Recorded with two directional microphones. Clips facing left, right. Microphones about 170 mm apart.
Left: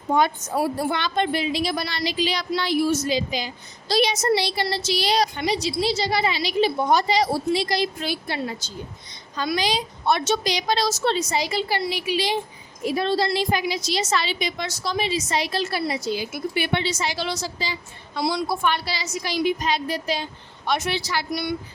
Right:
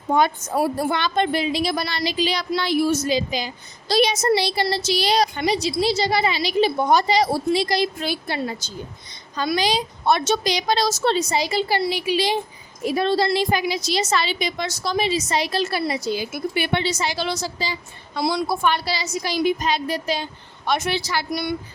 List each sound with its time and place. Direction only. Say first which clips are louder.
0.2 s a woman's voice: right 2 dB; 50° right (ahead or behind); by 12.3 s 35° right (ahead or behind)
13.0 s a woman's voice: right 3 dB; 55° right (ahead or behind)